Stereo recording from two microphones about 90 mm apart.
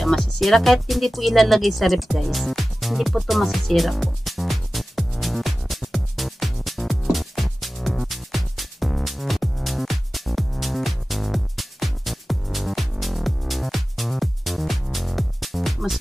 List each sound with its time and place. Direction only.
0.0 s music: centre (ahead or behind)